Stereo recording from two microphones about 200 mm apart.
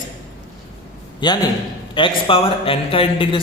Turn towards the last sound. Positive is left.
turn(degrees=25)  # may be behind; listen again after turning